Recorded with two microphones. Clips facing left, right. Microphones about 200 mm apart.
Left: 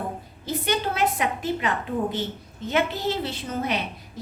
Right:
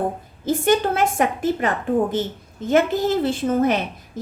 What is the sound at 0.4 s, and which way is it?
A woman's voice, 50° right (ahead or behind).